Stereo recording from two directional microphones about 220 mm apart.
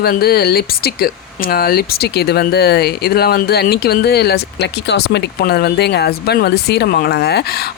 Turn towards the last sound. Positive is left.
turn(degrees=45)  # may be behind; listen again after turning